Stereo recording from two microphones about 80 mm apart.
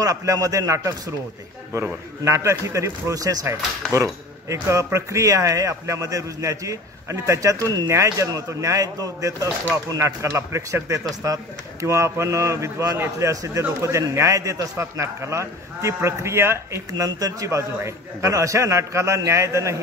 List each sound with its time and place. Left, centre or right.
0.0 s a man's voice: right
7.9 s a man's voice: right
16.9 s a man's voice: right